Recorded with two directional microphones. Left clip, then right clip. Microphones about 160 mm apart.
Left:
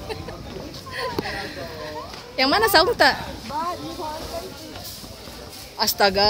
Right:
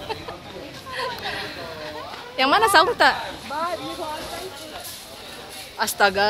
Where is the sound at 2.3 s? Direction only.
10° left (ahead or behind).